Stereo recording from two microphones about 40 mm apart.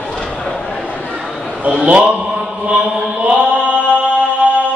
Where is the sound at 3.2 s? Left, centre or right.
Right.